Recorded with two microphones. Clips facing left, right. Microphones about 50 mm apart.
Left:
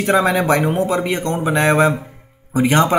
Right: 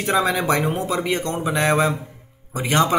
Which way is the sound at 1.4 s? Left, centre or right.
Left.